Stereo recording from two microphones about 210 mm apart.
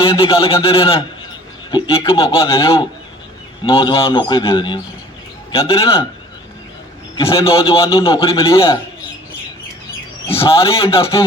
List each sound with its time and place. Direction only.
0.0 s a man's voice: 25° left (ahead or behind)
7.2 s a man's voice: 25° left (ahead or behind)
10.2 s a man's voice: 25° left (ahead or behind)